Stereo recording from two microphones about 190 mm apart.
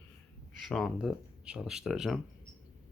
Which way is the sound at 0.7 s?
Centre (ahead or behind).